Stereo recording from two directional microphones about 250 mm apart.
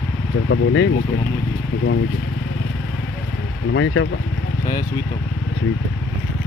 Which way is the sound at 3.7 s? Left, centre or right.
Left.